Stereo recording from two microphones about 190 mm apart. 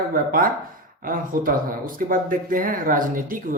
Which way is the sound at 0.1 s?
50° right (ahead or behind).